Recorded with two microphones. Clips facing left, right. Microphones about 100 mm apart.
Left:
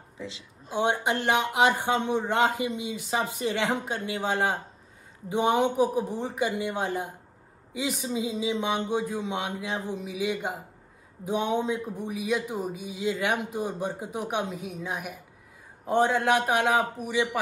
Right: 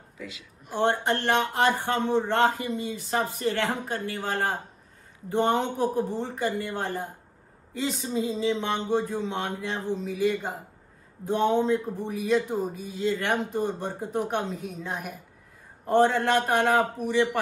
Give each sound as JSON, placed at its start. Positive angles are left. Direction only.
{"t": 0.2, "sound": "speech", "side_deg": 25}
{"t": 0.7, "sound": "a man's voice", "side_deg": 15}